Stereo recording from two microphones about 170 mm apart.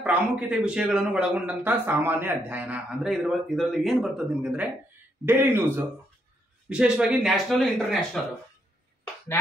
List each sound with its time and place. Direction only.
0.0 s a man's voice: 5° right (ahead or behind)